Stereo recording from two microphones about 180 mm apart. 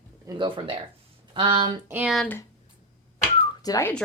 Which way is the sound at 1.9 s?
5° right (ahead or behind).